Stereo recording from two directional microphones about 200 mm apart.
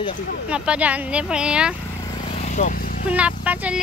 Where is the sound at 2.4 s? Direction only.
40° left (ahead or behind).